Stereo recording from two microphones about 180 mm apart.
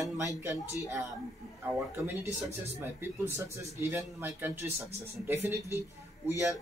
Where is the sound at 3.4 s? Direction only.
15° right (ahead or behind).